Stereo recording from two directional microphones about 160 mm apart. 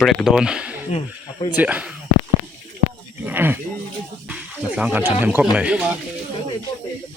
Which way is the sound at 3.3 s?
10° right (ahead or behind).